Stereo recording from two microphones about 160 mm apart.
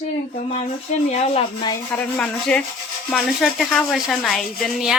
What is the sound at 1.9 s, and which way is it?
Speech, 5° left (ahead or behind).